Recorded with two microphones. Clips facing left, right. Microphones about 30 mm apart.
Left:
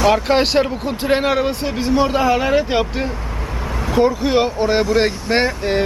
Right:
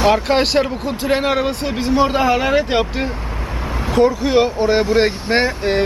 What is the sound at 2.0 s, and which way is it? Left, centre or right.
Speech, centre.